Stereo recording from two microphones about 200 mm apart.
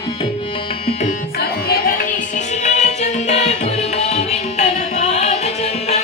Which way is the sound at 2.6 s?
35° left (ahead or behind).